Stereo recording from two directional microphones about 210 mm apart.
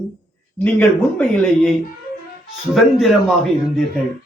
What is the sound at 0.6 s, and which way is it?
Speech, 5° left (ahead or behind).